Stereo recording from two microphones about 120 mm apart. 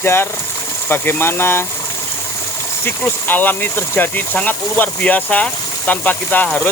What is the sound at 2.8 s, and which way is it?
Speech, 15° left (ahead or behind).